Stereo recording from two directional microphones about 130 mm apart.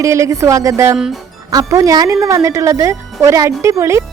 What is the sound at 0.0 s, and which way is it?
Speech, 25° right (ahead or behind).